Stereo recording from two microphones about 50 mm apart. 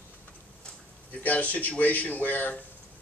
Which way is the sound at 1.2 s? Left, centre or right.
Left.